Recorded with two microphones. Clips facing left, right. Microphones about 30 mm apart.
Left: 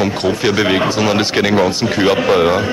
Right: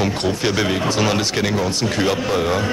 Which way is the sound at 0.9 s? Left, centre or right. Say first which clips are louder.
Left 3 dB; centre.